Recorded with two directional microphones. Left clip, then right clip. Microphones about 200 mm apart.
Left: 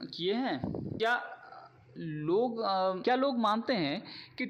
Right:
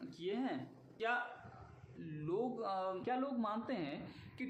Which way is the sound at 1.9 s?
40° left (ahead or behind).